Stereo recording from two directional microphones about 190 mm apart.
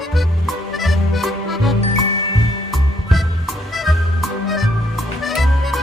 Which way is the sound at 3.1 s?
Centre (ahead or behind).